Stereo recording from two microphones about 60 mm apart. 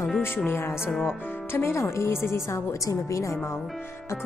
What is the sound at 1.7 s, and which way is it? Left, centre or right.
Speech, left.